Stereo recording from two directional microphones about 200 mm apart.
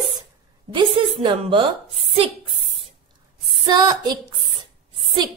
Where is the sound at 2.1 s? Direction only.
30° right (ahead or behind).